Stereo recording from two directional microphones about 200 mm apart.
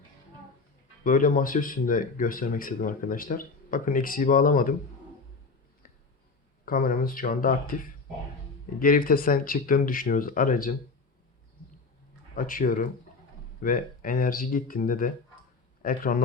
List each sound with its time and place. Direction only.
1.0 s speech: 40° left (ahead or behind)
6.7 s speech: 45° left (ahead or behind)
12.4 s speech: 45° left (ahead or behind)